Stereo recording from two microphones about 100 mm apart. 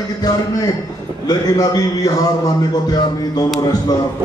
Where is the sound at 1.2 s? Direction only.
40° left (ahead or behind).